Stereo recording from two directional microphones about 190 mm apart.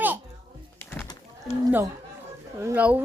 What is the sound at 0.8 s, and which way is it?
Bird, 10° left (ahead or behind).